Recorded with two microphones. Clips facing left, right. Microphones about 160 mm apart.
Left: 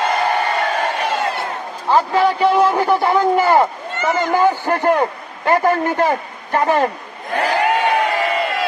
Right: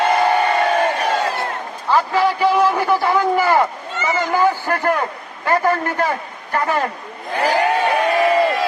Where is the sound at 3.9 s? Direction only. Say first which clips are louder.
Left 2 dB; 55° left (ahead or behind).